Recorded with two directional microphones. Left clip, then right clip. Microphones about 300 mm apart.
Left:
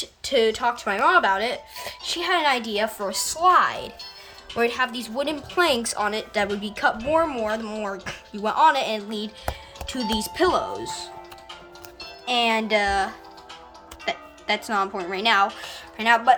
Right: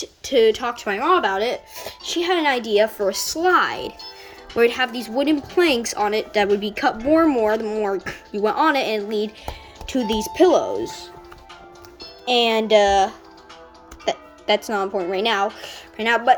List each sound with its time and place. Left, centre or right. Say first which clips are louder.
0.2 s speech: right 4 dB; centre
10.5 s speech: right 6 dB; centre
10.8 s speech: even; centre
12.2 s speech: right 4 dB; centre
14.4 s speech: right 3 dB; centre